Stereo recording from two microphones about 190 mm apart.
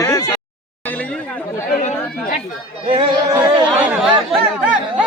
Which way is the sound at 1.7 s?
45° left (ahead or behind).